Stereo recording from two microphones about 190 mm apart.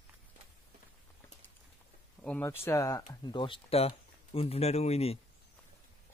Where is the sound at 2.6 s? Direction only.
15° left (ahead or behind); by 5.1 s 35° left (ahead or behind).